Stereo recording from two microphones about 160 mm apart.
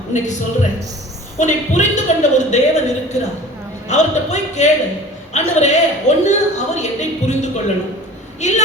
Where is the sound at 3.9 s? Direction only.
45° left (ahead or behind).